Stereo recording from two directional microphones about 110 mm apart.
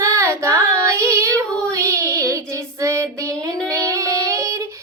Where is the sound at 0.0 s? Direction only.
25° right (ahead or behind).